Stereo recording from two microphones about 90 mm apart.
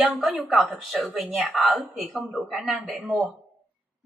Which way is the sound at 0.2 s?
5° right (ahead or behind).